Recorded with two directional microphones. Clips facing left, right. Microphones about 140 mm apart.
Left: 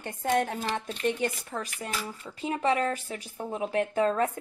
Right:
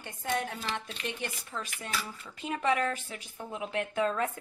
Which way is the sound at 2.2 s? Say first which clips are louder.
Left 4 dB; 30° left (ahead or behind).